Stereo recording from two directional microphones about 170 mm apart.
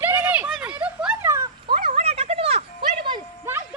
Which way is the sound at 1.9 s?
35° right (ahead or behind).